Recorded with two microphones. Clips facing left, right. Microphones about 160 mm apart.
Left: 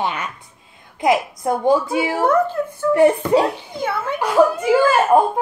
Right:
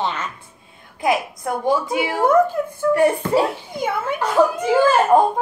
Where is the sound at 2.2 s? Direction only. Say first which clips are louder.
Right 4 dB; 10° right (ahead or behind).